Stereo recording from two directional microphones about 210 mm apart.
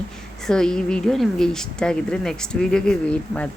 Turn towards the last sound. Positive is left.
turn(degrees=5)  # may be behind; listen again after turning